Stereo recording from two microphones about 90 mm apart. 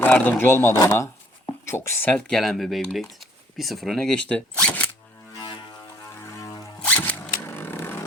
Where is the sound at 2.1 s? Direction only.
10° left (ahead or behind).